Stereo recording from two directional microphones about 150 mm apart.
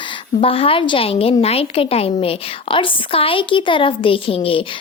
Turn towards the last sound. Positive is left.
turn(degrees=35)  # may be behind; listen again after turning